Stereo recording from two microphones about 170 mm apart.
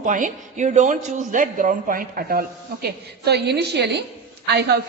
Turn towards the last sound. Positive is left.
turn(degrees=-75)  # may be behind; listen again after turning